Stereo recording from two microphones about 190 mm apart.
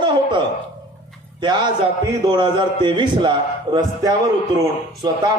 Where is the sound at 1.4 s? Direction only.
25° right (ahead or behind).